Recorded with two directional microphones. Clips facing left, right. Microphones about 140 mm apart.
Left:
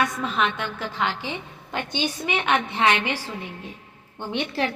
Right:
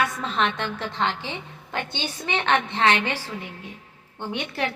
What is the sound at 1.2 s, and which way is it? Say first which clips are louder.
A woman's voice: left 2 dB; 15° left (ahead or behind).